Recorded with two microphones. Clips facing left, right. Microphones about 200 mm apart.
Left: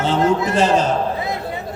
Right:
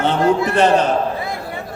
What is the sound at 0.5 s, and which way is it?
Speech, 60° right (ahead or behind).